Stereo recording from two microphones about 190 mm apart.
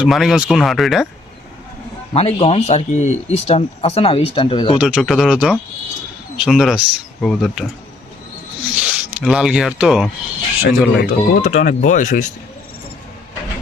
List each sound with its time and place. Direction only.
0.0 s speech: centre (ahead or behind)
2.1 s speech: 35° left (ahead or behind)
4.8 s speech: 5° right (ahead or behind)
8.7 s speech: 5° right (ahead or behind)
10.6 s speech: 50° left (ahead or behind)